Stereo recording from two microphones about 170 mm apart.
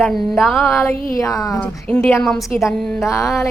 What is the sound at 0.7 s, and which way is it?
A woman's voice, 15° left (ahead or behind).